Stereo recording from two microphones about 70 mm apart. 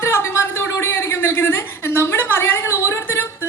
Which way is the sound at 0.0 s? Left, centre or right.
Left.